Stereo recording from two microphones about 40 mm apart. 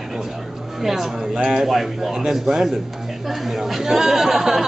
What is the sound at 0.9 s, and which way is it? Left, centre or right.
Speech, centre.